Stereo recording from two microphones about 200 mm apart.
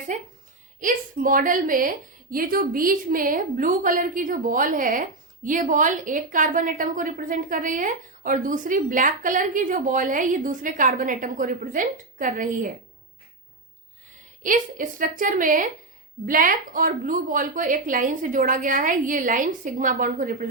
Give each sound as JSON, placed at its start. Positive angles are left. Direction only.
{"t": 0.1, "sound": "a woman's voice", "side_deg": -40}
{"t": 14.4, "sound": "a woman's voice", "side_deg": -40}